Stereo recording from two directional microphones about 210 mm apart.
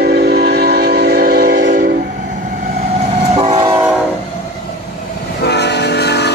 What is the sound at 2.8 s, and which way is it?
Train, 30° right (ahead or behind).